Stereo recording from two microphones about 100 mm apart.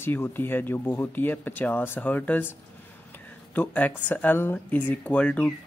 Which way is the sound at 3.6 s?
15° left (ahead or behind).